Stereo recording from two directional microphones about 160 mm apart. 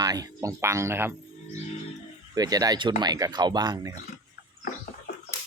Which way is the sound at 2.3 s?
25° right (ahead or behind).